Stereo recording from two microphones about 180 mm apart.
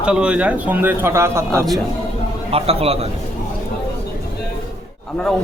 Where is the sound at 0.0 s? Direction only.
5° right (ahead or behind).